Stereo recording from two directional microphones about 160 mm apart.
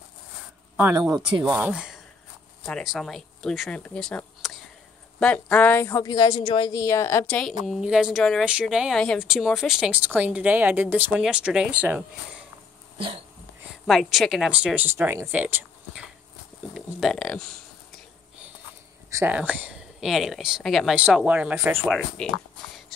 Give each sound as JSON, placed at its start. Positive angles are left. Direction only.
{"t": 0.7, "sound": "speech", "side_deg": -15}
{"t": 1.6, "sound": "speech", "side_deg": -5}
{"t": 6.0, "sound": "a woman's voice", "side_deg": 25}
{"t": 6.8, "sound": "speech", "side_deg": 15}
{"t": 13.8, "sound": "speech", "side_deg": 0}
{"t": 19.1, "sound": "speech", "side_deg": -10}
{"t": 21.9, "sound": "speech", "side_deg": 5}